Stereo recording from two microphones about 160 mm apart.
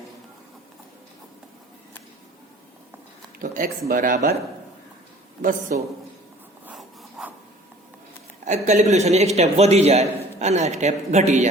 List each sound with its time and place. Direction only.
3.3 s speech: 60° right (ahead or behind)
5.4 s speech: 60° right (ahead or behind)
6.7 s a sound: 5° right (ahead or behind)
8.4 s a man's voice: 45° right (ahead or behind)